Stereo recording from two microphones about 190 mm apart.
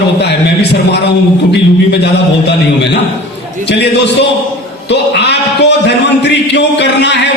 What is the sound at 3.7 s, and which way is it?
A man's voice, 65° left (ahead or behind).